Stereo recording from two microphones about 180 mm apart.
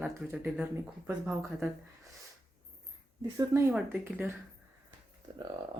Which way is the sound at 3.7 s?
5° right (ahead or behind).